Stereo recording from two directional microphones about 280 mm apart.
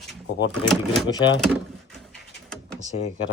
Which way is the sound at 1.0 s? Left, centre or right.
Centre.